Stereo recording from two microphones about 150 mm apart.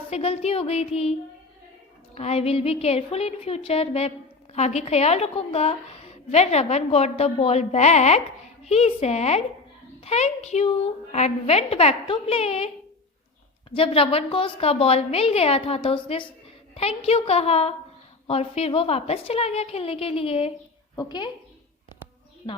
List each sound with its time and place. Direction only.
0.1 s a woman's voice: 40° left (ahead or behind)
2.1 s a woman's voice: 45° left (ahead or behind)
13.7 s a woman's voice: 40° left (ahead or behind)
20.9 s a woman's voice: 25° left (ahead or behind)
22.4 s a woman's voice: 35° left (ahead or behind)